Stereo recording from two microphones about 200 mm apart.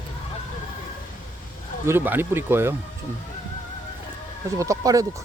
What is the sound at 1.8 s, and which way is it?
Speech, 10° right (ahead or behind).